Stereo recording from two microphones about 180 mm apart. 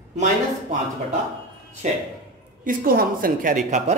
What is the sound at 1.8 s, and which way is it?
Speech, 40° right (ahead or behind).